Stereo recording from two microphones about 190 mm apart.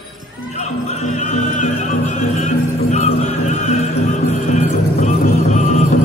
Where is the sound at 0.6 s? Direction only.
35° left (ahead or behind).